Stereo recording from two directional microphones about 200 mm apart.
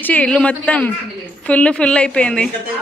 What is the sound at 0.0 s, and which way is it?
A woman's voice, 5° left (ahead or behind).